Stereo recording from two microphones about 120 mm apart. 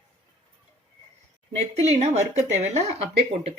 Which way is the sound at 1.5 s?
65° right (ahead or behind).